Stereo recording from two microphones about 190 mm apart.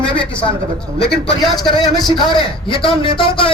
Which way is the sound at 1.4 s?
Centre (ahead or behind).